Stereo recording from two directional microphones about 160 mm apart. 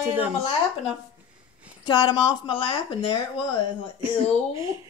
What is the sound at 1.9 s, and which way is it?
Speech, 30° left (ahead or behind).